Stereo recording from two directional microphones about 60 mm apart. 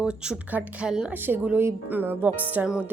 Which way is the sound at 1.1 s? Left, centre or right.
Right.